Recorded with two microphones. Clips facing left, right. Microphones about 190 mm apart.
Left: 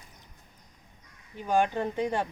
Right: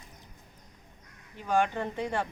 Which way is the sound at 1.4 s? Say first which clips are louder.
Left 2 dB; 15° left (ahead or behind).